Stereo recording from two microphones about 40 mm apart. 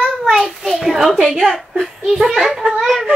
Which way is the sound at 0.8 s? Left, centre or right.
Centre.